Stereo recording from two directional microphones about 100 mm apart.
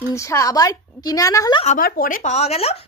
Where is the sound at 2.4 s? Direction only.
90° left.